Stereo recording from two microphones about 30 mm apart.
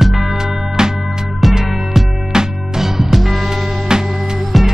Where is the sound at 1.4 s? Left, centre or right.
Centre.